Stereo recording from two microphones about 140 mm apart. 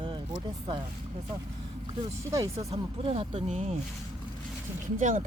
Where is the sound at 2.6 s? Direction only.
50° right (ahead or behind).